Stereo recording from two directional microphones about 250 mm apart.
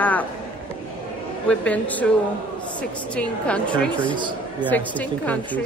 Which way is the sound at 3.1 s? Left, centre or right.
Centre.